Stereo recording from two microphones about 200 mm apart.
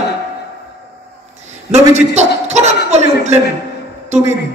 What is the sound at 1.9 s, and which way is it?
A man's voice, 35° right (ahead or behind).